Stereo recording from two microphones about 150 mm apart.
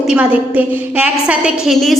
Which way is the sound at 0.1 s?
10° right (ahead or behind).